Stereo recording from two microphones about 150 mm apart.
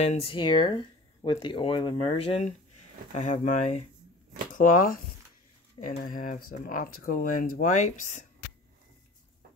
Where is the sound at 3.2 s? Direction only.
55° left (ahead or behind).